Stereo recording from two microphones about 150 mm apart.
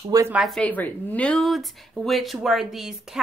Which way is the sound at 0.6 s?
10° left (ahead or behind).